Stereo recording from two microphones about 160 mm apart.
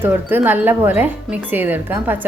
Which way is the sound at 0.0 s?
10° right (ahead or behind).